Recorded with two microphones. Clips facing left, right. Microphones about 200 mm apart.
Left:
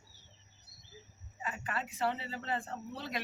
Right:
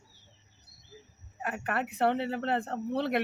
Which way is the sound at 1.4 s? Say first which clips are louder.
Right 7 dB; 65° right (ahead or behind).